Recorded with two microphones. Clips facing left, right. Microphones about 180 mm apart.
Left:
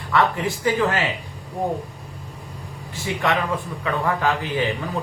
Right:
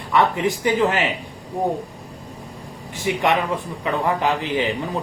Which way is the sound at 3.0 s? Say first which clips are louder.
Right 3 dB; 20° right (ahead or behind).